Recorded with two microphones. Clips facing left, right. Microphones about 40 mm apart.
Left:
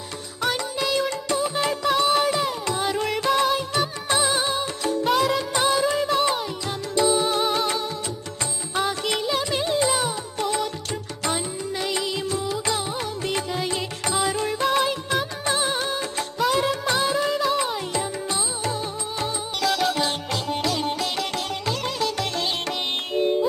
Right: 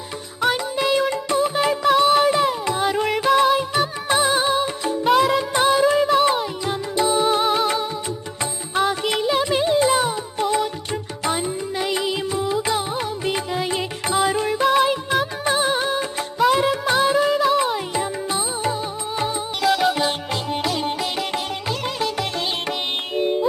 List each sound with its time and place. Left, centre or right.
0.4 s music: centre